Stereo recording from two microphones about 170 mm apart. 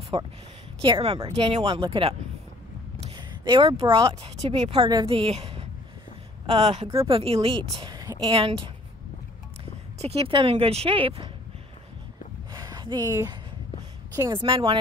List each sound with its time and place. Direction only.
0.1 s a woman's voice: 30° right (ahead or behind)
3.2 s a sound: 30° right (ahead or behind)
3.9 s a woman's voice: 35° right (ahead or behind)
9.9 s a woman's voice: 35° right (ahead or behind)
12.5 s a sound: 20° right (ahead or behind)
14.1 s a woman's voice: 25° right (ahead or behind)